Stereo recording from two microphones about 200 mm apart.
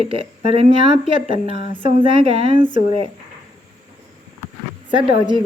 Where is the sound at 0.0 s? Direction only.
25° right (ahead or behind).